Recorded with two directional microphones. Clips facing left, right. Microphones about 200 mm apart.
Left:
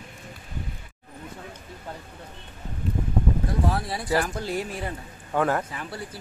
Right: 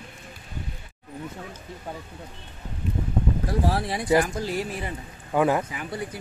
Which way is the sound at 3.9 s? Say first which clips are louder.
Right 4 dB; 15° right (ahead or behind).